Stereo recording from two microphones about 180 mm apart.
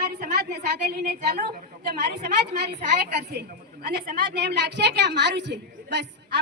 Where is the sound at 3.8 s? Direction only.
60° right (ahead or behind).